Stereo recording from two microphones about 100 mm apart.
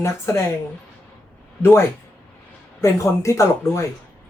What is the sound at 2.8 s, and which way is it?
Speech, 30° left (ahead or behind).